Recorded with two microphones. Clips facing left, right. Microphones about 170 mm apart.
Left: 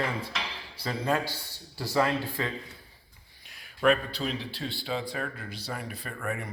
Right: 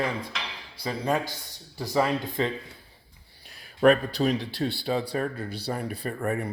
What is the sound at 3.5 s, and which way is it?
Speech, 40° right (ahead or behind).